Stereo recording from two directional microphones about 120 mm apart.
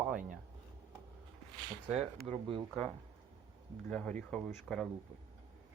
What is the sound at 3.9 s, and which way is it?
Speech, 10° left (ahead or behind).